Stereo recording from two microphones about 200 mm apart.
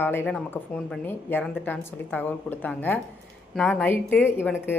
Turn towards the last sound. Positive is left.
turn(degrees=10)  # may be behind; listen again after turning